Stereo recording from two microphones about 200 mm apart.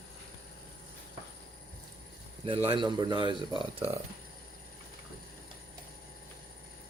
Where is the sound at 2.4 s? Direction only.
25° right (ahead or behind).